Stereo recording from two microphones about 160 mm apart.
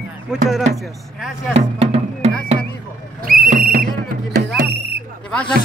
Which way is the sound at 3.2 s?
65° right (ahead or behind).